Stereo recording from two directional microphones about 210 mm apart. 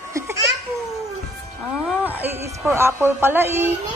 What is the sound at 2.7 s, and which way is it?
Speech, 10° right (ahead or behind).